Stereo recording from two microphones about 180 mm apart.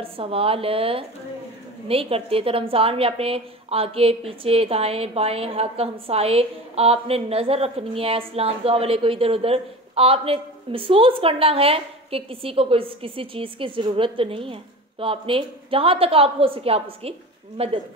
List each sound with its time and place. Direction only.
0.0 s a woman's voice: 30° right (ahead or behind)